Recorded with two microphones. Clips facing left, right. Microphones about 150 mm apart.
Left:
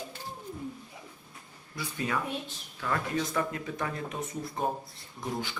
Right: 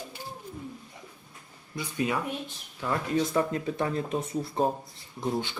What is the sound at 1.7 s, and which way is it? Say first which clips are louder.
Speech: right 3 dB; 20° right (ahead or behind).